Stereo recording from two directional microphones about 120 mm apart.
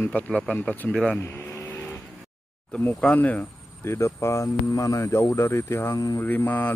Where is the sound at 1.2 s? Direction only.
15° left (ahead or behind).